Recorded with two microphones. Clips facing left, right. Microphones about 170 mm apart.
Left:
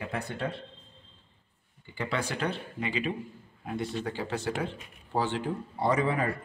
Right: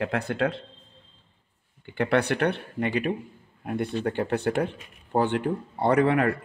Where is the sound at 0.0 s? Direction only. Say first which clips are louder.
Right 8 dB; 85° right.